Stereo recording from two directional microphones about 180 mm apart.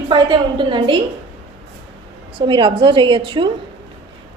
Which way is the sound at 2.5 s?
30° right (ahead or behind).